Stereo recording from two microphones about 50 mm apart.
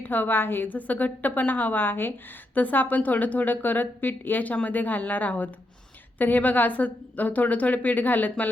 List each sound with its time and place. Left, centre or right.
0.0 s a woman's voice: left
2.6 s a woman's voice: left